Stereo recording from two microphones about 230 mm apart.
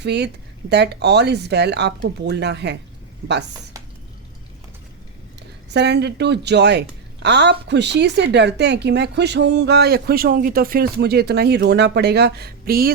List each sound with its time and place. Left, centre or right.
0.0 s a woman's voice: right
5.4 s a woman's voice: right